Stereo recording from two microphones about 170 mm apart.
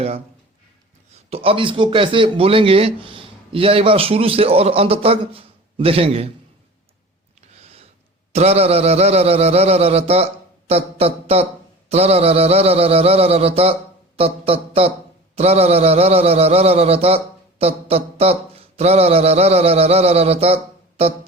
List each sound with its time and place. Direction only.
1.1 s a man's voice: 35° right (ahead or behind)
7.6 s a sound: 35° right (ahead or behind)
8.3 s a man's voice: 40° right (ahead or behind)